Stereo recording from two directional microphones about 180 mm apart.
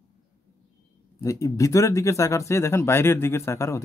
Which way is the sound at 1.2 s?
20° left (ahead or behind).